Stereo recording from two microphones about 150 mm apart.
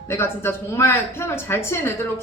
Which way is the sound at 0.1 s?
15° left (ahead or behind).